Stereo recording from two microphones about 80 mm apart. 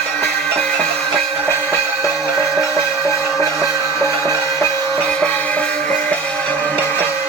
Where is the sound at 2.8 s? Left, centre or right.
Left.